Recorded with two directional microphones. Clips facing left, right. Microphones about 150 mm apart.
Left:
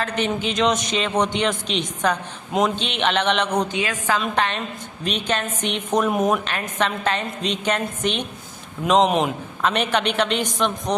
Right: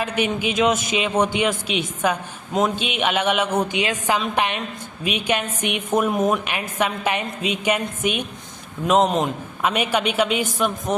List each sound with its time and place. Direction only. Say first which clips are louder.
0.0 s a man's voice: right 1 dB; 10° right (ahead or behind)
3.8 s a man's voice: right 1 dB; 20° right (ahead or behind); by 9.3 s centre (ahead or behind)
9.6 s a man's voice: even; 10° right (ahead or behind)